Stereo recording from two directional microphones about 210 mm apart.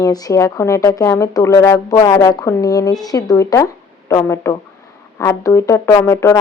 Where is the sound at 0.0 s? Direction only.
15° left (ahead or behind).